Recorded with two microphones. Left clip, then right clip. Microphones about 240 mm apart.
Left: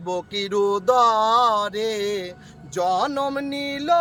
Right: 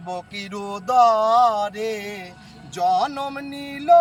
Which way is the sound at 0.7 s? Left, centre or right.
Left.